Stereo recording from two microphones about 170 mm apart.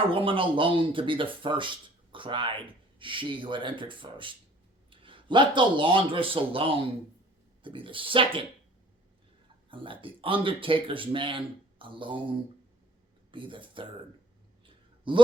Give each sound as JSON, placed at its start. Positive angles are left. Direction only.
{"t": 0.0, "sound": "speech", "side_deg": -30}
{"t": 9.6, "sound": "speech", "side_deg": -30}
{"t": 13.3, "sound": "speech", "side_deg": -30}
{"t": 14.7, "sound": "a sound", "side_deg": -30}